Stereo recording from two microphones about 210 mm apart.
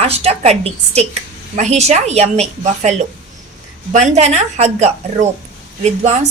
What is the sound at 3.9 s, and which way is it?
A woman's voice, 35° right (ahead or behind).